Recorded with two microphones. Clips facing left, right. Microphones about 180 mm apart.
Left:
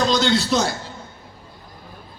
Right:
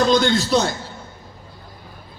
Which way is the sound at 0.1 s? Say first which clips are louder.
Right 2 dB; 55° right (ahead or behind).